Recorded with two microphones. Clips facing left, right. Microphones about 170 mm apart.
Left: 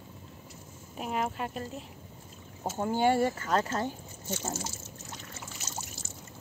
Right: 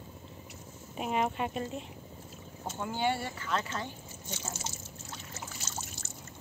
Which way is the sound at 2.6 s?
45° left (ahead or behind).